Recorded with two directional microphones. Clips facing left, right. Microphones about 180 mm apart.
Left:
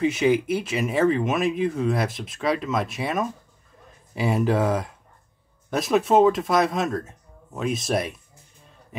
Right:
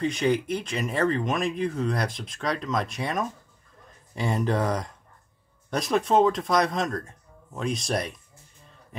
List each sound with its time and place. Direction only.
0.0 s speech: 5° left (ahead or behind)